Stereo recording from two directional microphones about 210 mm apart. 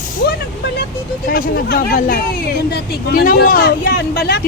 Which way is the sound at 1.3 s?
45° left (ahead or behind).